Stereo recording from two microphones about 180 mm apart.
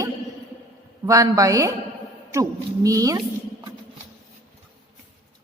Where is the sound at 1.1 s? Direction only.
20° right (ahead or behind).